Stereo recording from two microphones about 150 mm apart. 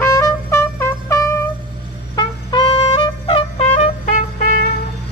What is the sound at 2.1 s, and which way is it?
Trumpet, 35° left (ahead or behind).